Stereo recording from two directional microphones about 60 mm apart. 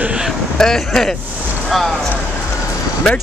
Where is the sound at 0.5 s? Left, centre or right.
Centre.